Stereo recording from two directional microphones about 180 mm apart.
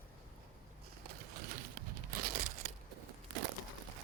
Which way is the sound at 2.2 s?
50° right (ahead or behind).